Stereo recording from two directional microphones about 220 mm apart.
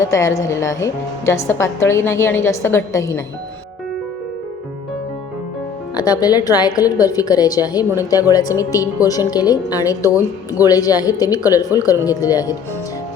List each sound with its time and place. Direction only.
0.0 s a woman's voice: 15° left (ahead or behind)
6.0 s a woman's voice: 15° left (ahead or behind)